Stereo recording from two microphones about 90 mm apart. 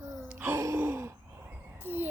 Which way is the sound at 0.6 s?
30° right (ahead or behind).